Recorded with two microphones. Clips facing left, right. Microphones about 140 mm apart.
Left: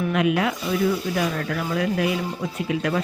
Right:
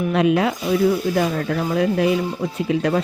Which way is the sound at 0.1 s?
30° right (ahead or behind).